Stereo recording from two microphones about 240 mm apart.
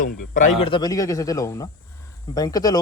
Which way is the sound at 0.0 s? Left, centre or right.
Left.